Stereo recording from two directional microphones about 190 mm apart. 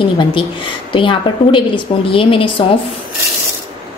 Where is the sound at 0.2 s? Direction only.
25° left (ahead or behind).